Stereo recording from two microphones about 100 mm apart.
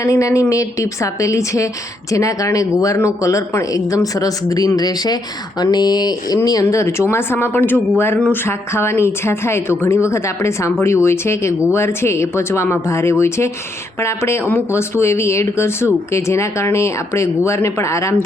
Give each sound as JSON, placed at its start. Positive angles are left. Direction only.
{"t": 0.0, "sound": "a woman's voice", "side_deg": 30}